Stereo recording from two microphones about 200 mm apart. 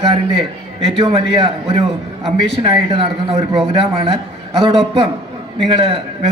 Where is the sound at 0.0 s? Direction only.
25° right (ahead or behind).